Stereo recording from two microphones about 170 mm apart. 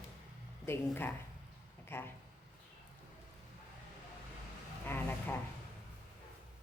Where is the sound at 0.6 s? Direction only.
15° left (ahead or behind).